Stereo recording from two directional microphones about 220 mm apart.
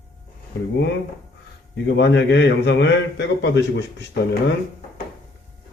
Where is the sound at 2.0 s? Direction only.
50° left (ahead or behind).